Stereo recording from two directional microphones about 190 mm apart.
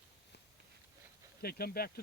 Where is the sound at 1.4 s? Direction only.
55° left (ahead or behind).